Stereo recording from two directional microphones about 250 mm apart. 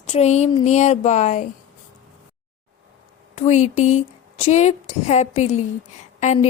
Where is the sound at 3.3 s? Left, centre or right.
Left.